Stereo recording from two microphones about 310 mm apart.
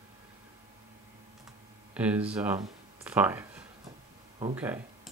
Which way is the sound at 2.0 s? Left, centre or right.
Centre.